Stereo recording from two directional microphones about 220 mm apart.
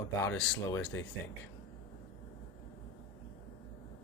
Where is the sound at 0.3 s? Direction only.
5° left (ahead or behind).